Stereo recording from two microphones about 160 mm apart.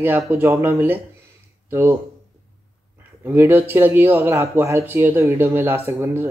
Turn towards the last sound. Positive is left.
turn(degrees=-15)  # may be behind; listen again after turning